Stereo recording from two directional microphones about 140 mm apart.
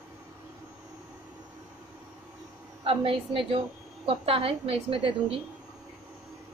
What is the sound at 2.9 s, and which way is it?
A woman's voice, 40° right (ahead or behind).